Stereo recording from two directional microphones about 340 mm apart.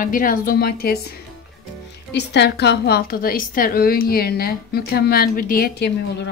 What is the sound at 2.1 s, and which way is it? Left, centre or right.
A woman's voice, left.